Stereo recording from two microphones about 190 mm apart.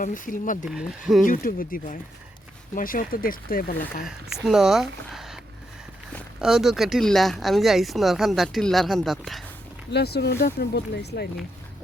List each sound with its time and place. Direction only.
0.0 s speech: 45° left (ahead or behind)
0.7 s speech: 5° right (ahead or behind)
1.2 s speech: 45° left (ahead or behind)
4.4 s speech: centre (ahead or behind)
6.4 s speech: centre (ahead or behind)
9.9 s speech: 60° left (ahead or behind)